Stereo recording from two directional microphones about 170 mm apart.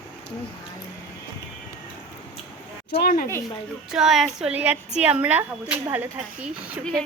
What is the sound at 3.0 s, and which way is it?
Speech, 65° left (ahead or behind).